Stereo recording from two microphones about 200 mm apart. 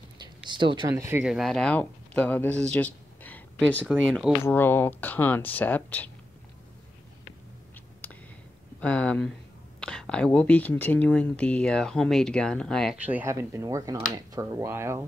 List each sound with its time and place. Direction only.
0.5 s speech: 25° right (ahead or behind)
1.2 s speech: centre (ahead or behind)
8.0 s a sound: 10° left (ahead or behind)
8.8 s speech: 5° left (ahead or behind); by 15.0 s 10° right (ahead or behind)